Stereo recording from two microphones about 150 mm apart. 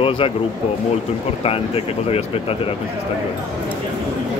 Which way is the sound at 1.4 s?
40° left (ahead or behind).